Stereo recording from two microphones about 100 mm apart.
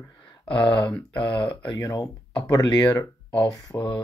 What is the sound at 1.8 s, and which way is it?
Speech, 35° left (ahead or behind).